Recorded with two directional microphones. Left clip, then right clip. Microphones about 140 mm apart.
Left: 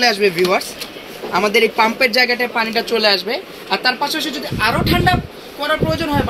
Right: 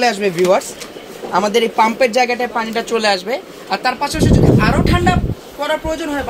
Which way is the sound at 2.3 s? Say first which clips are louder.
Left 1 dB; 45° right (ahead or behind).